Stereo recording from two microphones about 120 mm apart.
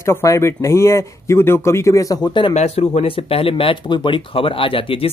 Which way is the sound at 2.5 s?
65° left (ahead or behind).